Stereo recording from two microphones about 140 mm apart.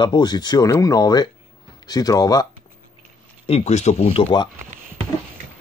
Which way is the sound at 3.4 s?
50° left (ahead or behind).